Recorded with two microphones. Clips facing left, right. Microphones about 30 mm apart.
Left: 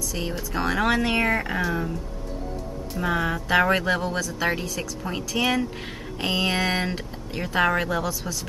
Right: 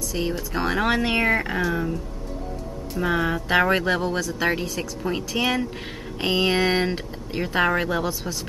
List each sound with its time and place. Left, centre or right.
0.1 s speech: centre
3.0 s speech: centre
8.0 s speech: centre